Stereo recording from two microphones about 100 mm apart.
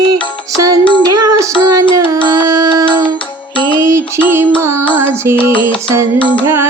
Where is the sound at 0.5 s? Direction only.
35° right (ahead or behind).